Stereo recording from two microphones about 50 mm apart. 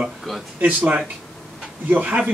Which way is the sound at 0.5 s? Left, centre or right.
Right.